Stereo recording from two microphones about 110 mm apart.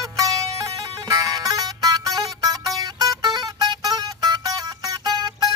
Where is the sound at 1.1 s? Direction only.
35° right (ahead or behind).